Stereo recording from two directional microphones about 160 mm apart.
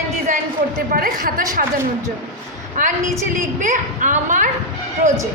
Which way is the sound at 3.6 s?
50° right (ahead or behind).